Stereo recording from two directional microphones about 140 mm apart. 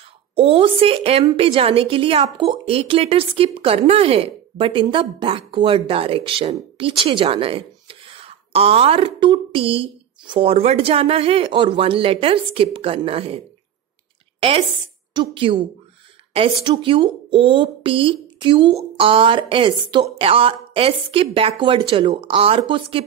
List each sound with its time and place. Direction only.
0.4 s a woman's voice: 40° right (ahead or behind)
15.1 s a woman's voice: 35° right (ahead or behind)
16.6 s a woman's voice: 35° right (ahead or behind)